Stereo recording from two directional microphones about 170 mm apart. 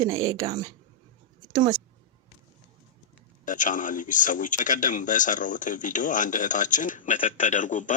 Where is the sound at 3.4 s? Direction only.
50° left (ahead or behind).